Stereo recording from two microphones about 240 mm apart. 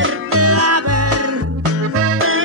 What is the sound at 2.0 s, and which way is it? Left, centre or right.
Music, right.